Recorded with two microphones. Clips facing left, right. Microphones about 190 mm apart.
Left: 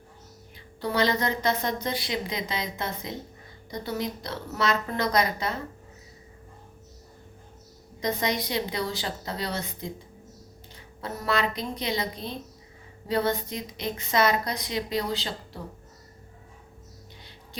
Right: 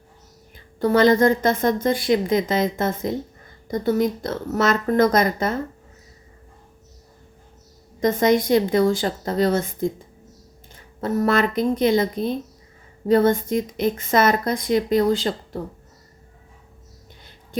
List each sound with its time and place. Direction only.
0.5 s a woman's voice: 50° right (ahead or behind)
8.0 s a woman's voice: 50° right (ahead or behind)
11.0 s a woman's voice: 50° right (ahead or behind)